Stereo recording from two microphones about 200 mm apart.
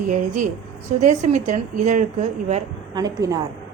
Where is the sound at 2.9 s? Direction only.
20° right (ahead or behind).